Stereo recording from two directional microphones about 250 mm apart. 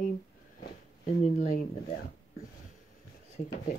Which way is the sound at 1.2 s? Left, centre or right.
Left.